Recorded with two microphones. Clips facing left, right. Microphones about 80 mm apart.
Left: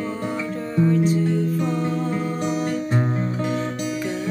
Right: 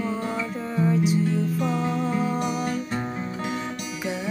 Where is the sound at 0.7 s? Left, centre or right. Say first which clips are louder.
Left 3 dB; centre.